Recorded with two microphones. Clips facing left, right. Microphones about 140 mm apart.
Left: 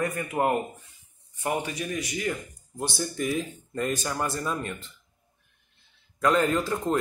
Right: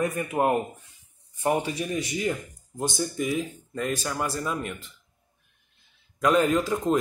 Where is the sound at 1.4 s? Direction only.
25° right (ahead or behind).